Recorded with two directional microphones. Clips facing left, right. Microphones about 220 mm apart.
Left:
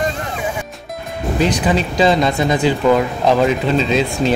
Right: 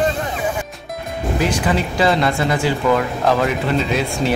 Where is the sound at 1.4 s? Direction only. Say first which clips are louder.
Left 3 dB; 20° left (ahead or behind).